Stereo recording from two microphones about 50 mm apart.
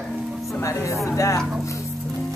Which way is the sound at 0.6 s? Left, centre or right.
Left.